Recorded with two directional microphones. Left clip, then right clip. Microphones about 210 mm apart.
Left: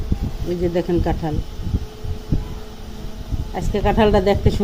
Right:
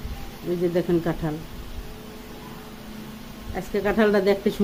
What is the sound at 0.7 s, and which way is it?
Speech, 10° left (ahead or behind).